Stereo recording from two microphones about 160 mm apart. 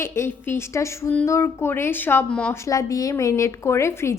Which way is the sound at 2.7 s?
20° left (ahead or behind).